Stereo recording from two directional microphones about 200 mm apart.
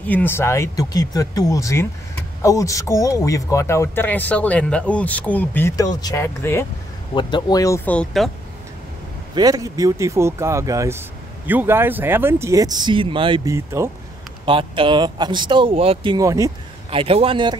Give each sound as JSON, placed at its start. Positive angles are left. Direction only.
{"t": 0.0, "sound": "a man's voice", "side_deg": 10}
{"t": 7.2, "sound": "a man's voice", "side_deg": 25}
{"t": 9.3, "sound": "speech", "side_deg": -20}
{"t": 14.4, "sound": "speech", "side_deg": -25}
{"t": 16.9, "sound": "speech", "side_deg": -30}